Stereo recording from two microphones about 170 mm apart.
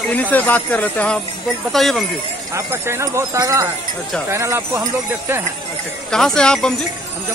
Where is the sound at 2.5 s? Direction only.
15° right (ahead or behind).